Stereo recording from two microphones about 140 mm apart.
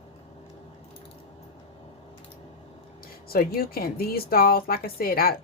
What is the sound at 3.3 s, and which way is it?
A woman's voice, 90° left.